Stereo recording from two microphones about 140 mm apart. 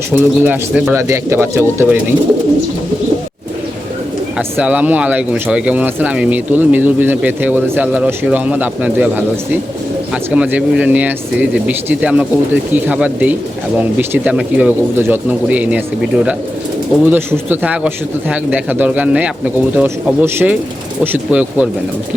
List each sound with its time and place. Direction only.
0.1 s speech: 15° right (ahead or behind)
4.4 s speech: 10° right (ahead or behind)
10.3 s speech: 10° right (ahead or behind)